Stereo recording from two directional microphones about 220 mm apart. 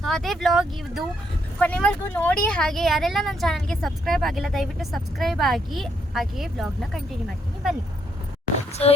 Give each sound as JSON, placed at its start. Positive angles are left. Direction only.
{"t": 0.0, "sound": "speech", "side_deg": 0}
{"t": 8.7, "sound": "speech", "side_deg": 30}